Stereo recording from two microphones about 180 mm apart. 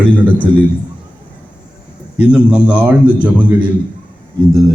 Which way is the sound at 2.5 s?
5° right (ahead or behind).